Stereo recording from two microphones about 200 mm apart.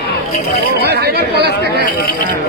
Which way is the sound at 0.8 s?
55° right (ahead or behind).